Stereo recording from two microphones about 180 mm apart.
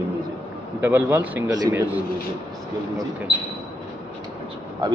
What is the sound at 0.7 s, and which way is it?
A man's voice, 10° right (ahead or behind).